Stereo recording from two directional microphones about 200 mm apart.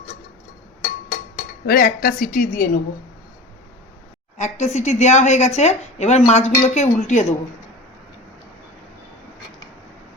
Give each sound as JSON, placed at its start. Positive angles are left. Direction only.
{"t": 1.6, "sound": "a woman's voice", "side_deg": 50}
{"t": 4.4, "sound": "a woman's voice", "side_deg": 35}